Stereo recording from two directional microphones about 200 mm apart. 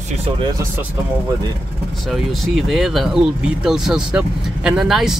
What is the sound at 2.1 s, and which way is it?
Speech, centre (ahead or behind).